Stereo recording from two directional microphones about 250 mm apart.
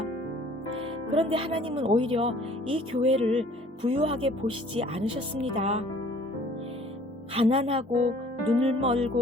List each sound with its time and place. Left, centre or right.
1.1 s speech: right
7.3 s speech: right